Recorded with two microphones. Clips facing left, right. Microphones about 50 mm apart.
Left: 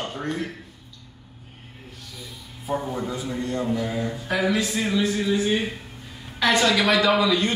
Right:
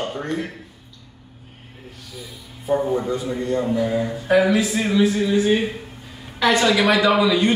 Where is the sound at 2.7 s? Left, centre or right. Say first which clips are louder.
Right 7 dB; centre.